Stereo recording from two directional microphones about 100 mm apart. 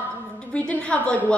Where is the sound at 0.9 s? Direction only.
15° left (ahead or behind).